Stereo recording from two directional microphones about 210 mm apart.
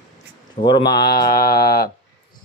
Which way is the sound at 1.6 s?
45° left (ahead or behind).